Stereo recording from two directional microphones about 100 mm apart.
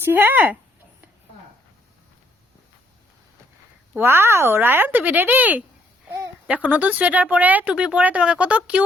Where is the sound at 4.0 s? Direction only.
25° right (ahead or behind).